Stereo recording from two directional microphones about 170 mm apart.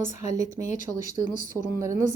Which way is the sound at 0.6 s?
45° left (ahead or behind).